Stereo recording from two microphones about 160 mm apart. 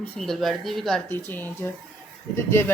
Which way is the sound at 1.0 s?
15° left (ahead or behind).